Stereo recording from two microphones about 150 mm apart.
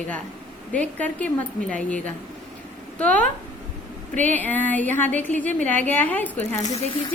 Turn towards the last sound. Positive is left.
turn(degrees=50)  # may be behind; listen again after turning